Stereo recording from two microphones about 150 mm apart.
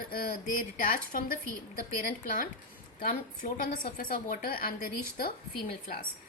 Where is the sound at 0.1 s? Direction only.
70° left (ahead or behind).